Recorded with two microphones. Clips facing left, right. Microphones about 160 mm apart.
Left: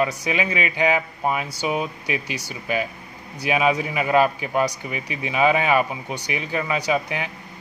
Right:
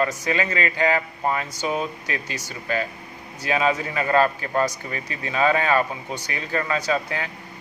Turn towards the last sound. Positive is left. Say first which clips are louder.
# left 1 dB
turn(degrees=15)  # may be behind; listen again after turning